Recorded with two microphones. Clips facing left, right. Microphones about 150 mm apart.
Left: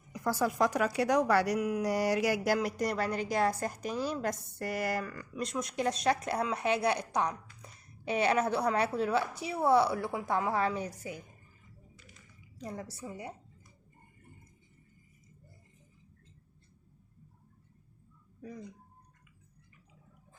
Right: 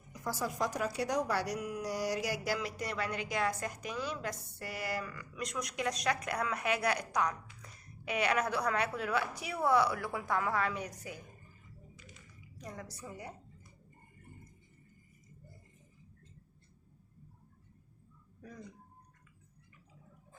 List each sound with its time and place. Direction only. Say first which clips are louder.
0.1 s a woman's voice: left 6 dB; 65° left (ahead or behind); by 5.2 s 45° left (ahead or behind)
5.4 s a woman's voice: left 4 dB; 30° left (ahead or behind)
12.5 s a woman's voice: left 5 dB; 30° left (ahead or behind)